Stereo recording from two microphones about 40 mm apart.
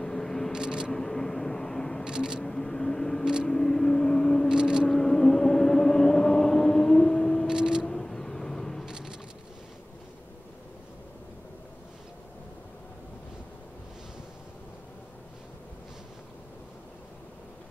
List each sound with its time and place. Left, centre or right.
0.0 s vehicle: centre
0.5 s vehicle: centre
0.9 s vehicle: centre
2.0 s a sound: centre
2.4 s vehicle: centre
4.5 s vehicle: centre
4.8 s vehicle: centre
7.4 s a sound: centre
7.8 s vehicle: centre
8.8 s a sound: centre